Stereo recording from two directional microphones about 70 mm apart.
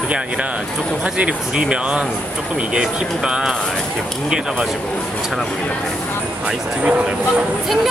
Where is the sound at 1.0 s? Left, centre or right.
Centre.